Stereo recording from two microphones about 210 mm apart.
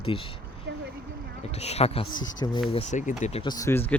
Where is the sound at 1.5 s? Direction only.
30° left (ahead or behind).